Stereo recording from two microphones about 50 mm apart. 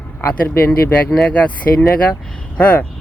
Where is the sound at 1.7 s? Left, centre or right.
Left.